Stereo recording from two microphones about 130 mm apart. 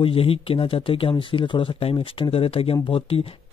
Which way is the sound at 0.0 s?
45° left (ahead or behind).